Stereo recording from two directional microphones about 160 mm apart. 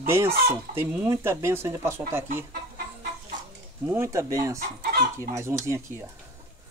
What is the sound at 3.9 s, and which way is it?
Speech, 15° right (ahead or behind).